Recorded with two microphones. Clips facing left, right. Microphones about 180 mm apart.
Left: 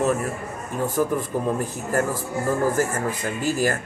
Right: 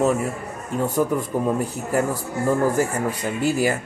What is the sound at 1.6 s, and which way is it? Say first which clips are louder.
Speech: right 1 dB; 10° right (ahead or behind).